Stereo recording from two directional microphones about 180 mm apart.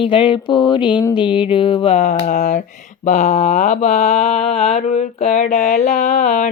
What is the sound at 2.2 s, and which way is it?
Speech, 45° left (ahead or behind).